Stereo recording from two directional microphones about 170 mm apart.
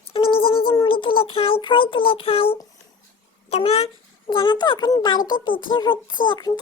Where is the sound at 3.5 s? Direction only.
35° left (ahead or behind).